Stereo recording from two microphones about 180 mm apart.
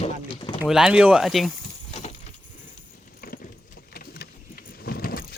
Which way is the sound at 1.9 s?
35° left (ahead or behind).